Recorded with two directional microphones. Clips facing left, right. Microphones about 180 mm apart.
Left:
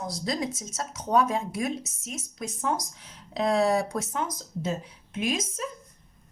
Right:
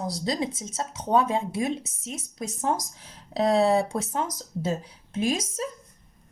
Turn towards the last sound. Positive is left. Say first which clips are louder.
# right 3 dB
turn(degrees=-35)  # may be behind; listen again after turning